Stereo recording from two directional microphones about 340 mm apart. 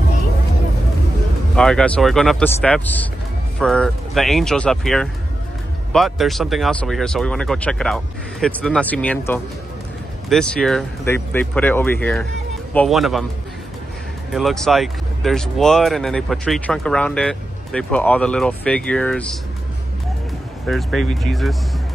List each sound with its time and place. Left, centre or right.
1.5 s speech: centre
14.3 s speech: centre
20.6 s speech: centre